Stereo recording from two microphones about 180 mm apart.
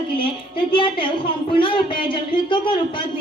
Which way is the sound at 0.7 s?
30° left (ahead or behind).